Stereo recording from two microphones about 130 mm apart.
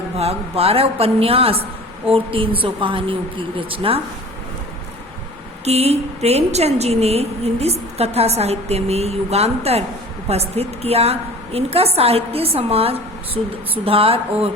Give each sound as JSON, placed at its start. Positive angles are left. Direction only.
{"t": 0.2, "sound": "a woman's voice", "side_deg": -50}
{"t": 5.6, "sound": "a woman's voice", "side_deg": -55}